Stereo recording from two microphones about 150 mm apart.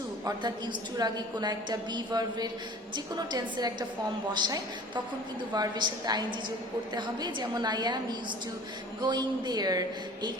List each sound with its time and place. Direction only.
0.3 s a woman's voice: 25° right (ahead or behind)
9.0 s a woman's voice: 30° right (ahead or behind)